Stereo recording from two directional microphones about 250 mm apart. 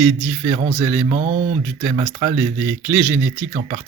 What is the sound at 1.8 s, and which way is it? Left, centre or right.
Speech, centre.